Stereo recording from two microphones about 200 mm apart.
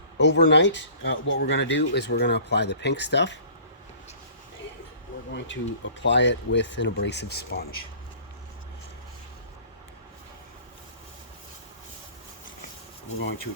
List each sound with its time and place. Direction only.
0.2 s speech: 60° left (ahead or behind)
5.3 s speech: 65° left (ahead or behind)